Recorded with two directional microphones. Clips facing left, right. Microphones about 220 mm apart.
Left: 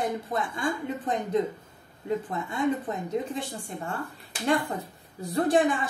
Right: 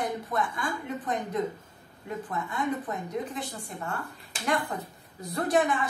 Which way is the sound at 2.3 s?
25° left (ahead or behind).